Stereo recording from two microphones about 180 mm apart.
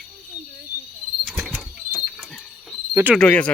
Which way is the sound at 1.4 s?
Centre (ahead or behind).